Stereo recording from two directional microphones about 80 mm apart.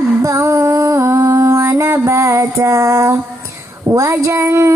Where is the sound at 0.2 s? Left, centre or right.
Right.